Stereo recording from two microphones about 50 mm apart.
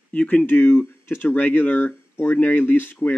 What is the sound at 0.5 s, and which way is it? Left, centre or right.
Speech, left.